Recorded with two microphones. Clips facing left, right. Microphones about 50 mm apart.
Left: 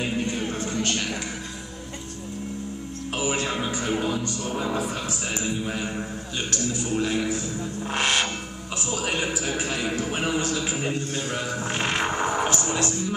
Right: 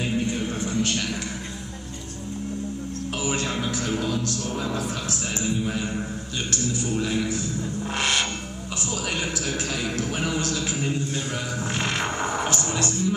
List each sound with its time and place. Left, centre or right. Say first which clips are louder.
0.2 s a sound: right 1 dB; left
3.2 s music: left 1 dB; centre
4.6 s a man's voice: left 4 dB; centre
8.0 s music: left 1 dB; left
9.5 s a man's voice: left 1 dB; centre
11.8 s music: left 2 dB; centre